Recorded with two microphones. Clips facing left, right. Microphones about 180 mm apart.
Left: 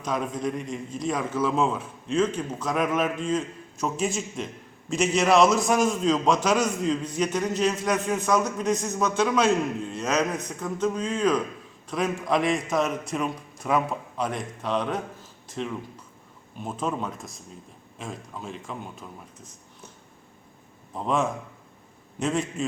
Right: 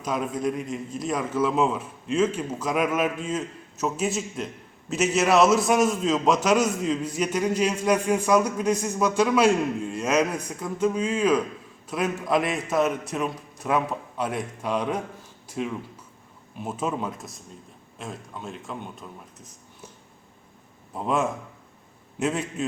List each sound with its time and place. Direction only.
0.0 s a man's voice: 5° right (ahead or behind)
20.9 s a man's voice: 5° right (ahead or behind)